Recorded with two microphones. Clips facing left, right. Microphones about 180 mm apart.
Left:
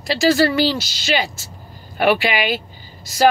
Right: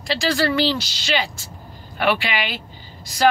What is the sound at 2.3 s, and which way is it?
Speech, 10° left (ahead or behind).